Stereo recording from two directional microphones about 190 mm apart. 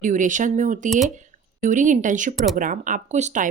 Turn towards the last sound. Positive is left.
turn(degrees=-40)  # may be behind; listen again after turning